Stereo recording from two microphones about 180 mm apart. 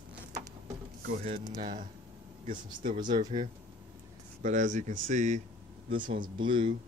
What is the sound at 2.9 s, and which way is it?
Speech, 25° right (ahead or behind).